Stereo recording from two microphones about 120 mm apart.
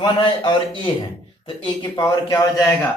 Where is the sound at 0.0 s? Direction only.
40° left (ahead or behind).